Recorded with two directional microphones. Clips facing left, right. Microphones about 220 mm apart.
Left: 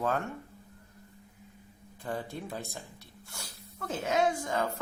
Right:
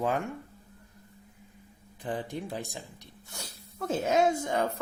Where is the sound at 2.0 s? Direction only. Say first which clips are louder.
Right 2 dB; 15° right (ahead or behind).